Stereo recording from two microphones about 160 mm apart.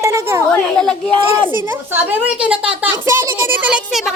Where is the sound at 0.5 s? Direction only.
5° left (ahead or behind).